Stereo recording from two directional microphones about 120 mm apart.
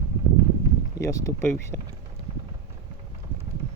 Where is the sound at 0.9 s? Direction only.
25° left (ahead or behind).